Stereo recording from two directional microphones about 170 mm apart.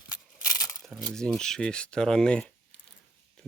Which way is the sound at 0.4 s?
20° left (ahead or behind).